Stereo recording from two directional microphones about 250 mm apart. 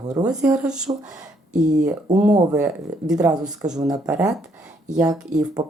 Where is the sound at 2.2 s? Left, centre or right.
Centre.